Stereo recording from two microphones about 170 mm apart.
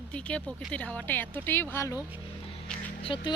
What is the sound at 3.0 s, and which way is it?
Speech, 30° left (ahead or behind).